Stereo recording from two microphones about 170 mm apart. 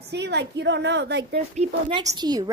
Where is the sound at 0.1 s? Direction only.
85° right.